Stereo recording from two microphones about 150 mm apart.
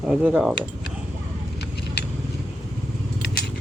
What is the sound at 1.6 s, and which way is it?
Vehicle, 90° left.